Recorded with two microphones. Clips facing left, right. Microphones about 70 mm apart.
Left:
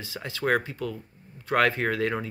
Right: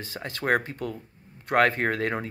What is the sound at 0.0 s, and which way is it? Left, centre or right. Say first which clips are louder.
Speech: left 1 dB; right.